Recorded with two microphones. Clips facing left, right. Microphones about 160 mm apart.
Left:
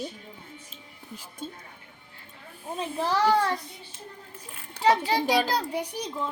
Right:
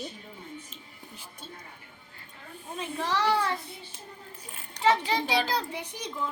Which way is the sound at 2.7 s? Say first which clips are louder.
Left 3 dB; 35° left (ahead or behind).